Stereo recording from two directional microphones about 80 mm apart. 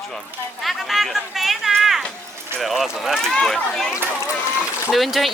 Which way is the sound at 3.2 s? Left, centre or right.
Centre.